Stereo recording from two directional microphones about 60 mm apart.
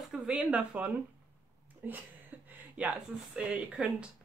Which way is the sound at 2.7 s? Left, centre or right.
Right.